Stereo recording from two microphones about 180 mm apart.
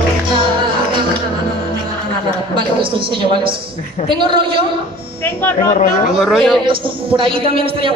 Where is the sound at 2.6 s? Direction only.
30° right (ahead or behind).